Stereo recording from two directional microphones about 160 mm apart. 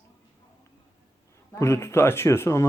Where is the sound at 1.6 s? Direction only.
15° left (ahead or behind).